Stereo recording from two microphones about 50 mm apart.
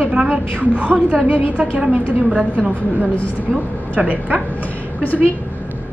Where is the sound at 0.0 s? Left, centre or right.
Centre.